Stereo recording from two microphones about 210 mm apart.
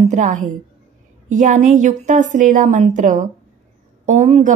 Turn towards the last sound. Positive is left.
turn(degrees=-30)  # may be behind; listen again after turning